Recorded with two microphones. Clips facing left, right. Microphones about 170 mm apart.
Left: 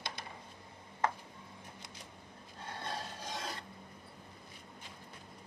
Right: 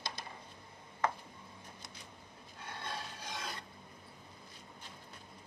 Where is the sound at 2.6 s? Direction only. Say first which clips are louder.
Left 2 dB; 35° left (ahead or behind).